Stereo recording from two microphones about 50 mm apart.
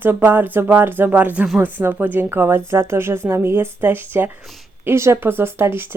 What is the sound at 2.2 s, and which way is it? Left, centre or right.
Speech, right.